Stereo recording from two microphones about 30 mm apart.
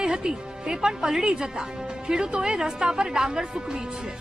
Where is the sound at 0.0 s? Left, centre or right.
Right.